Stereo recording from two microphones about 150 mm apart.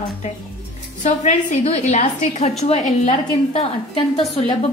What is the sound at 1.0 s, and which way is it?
A woman's voice, 50° left (ahead or behind).